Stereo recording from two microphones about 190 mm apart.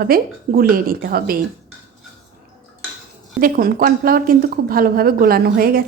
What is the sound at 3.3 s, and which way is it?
A woman's voice, 50° right (ahead or behind).